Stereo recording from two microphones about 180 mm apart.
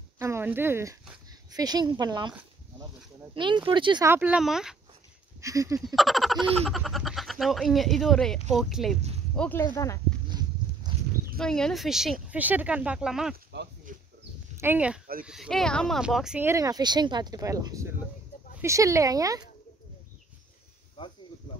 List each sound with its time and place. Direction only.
0.2 s speech: 15° right (ahead or behind)
3.3 s speech: 25° right (ahead or behind)
4.1 s speech: 10° right (ahead or behind)
5.4 s speech: 20° right (ahead or behind)
5.9 s speech: centre (ahead or behind); by 9.9 s 15° left (ahead or behind)
10.9 s livestock: 25° right (ahead or behind)
11.3 s speech: 5° left (ahead or behind)
13.9 s a sound: 45° right (ahead or behind)
14.6 s speech: 10° right (ahead or behind)
16.4 s speech: 20° right (ahead or behind)
21.0 s speech: 30° left (ahead or behind)